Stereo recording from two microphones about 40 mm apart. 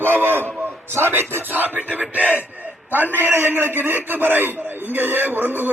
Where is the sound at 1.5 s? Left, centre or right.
Right.